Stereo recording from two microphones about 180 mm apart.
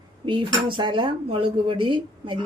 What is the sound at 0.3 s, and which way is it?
Speech, 25° right (ahead or behind).